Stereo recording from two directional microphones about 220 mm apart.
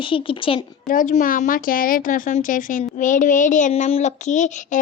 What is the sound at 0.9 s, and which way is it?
A woman's voice, 35° left (ahead or behind).